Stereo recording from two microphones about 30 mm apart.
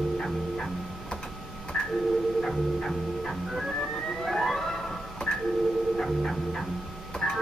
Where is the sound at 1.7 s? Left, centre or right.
Centre.